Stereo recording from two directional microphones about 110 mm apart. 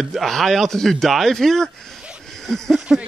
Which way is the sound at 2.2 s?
5° left (ahead or behind).